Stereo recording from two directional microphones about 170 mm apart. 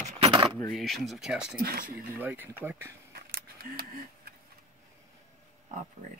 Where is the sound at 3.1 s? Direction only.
65° right (ahead or behind).